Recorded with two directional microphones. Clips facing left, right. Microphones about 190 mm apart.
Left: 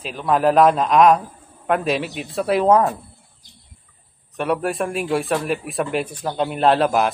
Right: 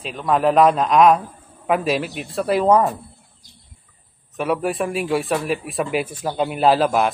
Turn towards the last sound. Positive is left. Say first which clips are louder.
# even
turn(degrees=0)  # may be behind; listen again after turning